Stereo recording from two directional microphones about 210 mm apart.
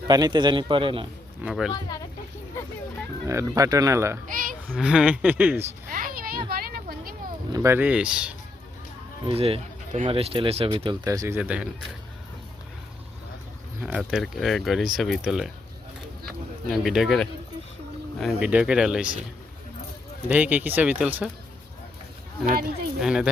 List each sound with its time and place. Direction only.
0.1 s speech: 20° right (ahead or behind)
1.5 s speech: centre (ahead or behind)
3.2 s speech: 15° right (ahead or behind)
4.3 s a sound: 40° right (ahead or behind)
4.7 s speech: 5° right (ahead or behind)
5.9 s a sound: 40° right (ahead or behind)
7.5 s speech: 15° right (ahead or behind)
9.2 s speech: 25° right (ahead or behind); by 11.7 s 5° right (ahead or behind)
14.0 s speech: centre (ahead or behind)
16.6 s speech: centre (ahead or behind)
20.2 s speech: 10° right (ahead or behind)
23.0 s speech: 5° right (ahead or behind)